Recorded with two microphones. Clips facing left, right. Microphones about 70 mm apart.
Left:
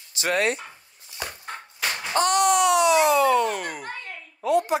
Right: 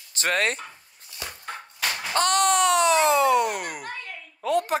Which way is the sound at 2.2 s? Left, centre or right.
Right.